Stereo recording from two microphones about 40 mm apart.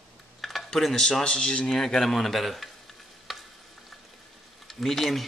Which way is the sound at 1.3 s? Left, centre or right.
Left.